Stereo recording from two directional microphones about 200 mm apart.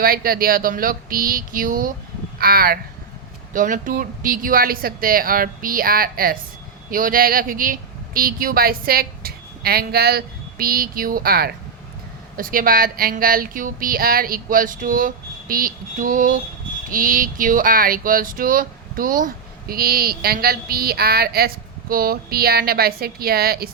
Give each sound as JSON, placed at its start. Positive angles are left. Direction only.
{"t": 0.0, "sound": "speech", "side_deg": -50}